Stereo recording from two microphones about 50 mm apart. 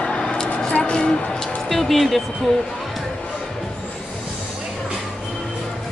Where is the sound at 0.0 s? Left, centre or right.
Centre.